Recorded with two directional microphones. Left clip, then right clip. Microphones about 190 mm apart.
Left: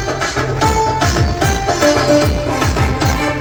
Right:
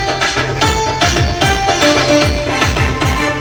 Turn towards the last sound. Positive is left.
turn(degrees=60)  # may be behind; listen again after turning